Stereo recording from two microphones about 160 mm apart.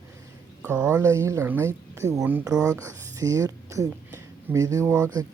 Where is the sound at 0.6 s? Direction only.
5° right (ahead or behind).